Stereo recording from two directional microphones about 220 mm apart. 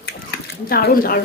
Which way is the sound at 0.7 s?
40° left (ahead or behind).